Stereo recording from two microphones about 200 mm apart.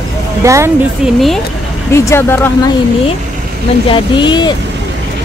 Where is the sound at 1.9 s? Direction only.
15° left (ahead or behind).